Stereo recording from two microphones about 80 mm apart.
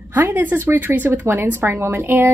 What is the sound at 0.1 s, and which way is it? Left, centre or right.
A woman's voice, right.